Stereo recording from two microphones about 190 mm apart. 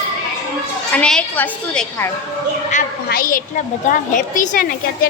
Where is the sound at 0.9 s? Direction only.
5° left (ahead or behind).